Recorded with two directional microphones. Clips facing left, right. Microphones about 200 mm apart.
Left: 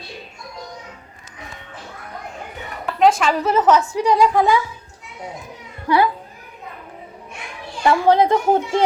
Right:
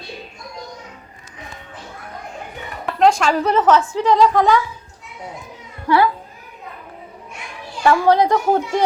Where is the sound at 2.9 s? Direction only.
5° left (ahead or behind).